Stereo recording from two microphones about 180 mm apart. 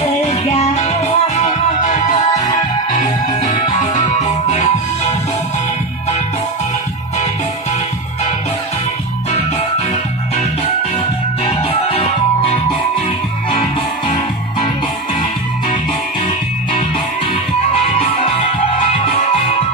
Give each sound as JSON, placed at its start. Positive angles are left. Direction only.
{"t": 0.3, "sound": "music", "side_deg": 40}
{"t": 2.0, "sound": "music", "side_deg": 30}
{"t": 2.4, "sound": "music", "side_deg": 45}
{"t": 11.4, "sound": "music", "side_deg": 30}